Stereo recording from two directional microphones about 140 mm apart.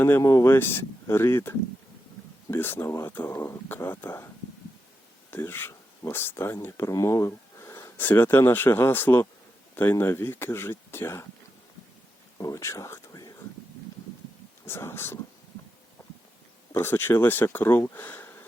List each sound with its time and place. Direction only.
0.0 s speech: 20° left (ahead or behind)
5.3 s speech: 15° left (ahead or behind)
12.4 s speech: 25° left (ahead or behind)
14.6 s speech: 15° left (ahead or behind)
16.7 s speech: 15° left (ahead or behind)